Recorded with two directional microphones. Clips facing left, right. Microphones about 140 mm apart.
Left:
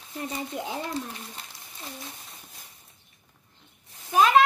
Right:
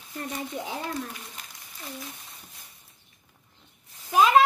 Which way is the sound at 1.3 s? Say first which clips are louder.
Left 2 dB; 30° left (ahead or behind).